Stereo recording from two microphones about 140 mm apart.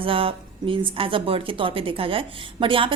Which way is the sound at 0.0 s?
40° right (ahead or behind).